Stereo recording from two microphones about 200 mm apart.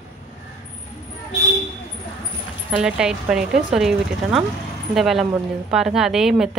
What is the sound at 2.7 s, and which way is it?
Speech, 5° right (ahead or behind).